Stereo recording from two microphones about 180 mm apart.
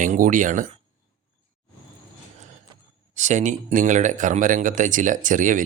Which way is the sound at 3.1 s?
40° right (ahead or behind).